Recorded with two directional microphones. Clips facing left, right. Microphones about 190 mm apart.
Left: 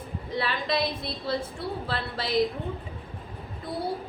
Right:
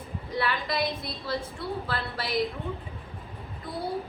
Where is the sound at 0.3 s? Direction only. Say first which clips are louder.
Left 1 dB; 25° left (ahead or behind).